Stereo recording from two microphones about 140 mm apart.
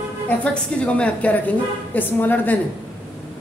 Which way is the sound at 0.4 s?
10° left (ahead or behind).